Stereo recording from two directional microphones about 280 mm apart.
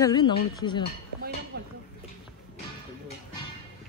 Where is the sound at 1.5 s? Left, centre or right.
Right.